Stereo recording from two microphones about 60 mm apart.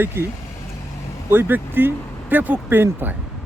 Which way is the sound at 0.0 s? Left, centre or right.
Right.